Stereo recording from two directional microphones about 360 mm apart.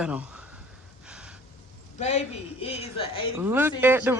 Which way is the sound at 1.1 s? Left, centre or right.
Centre.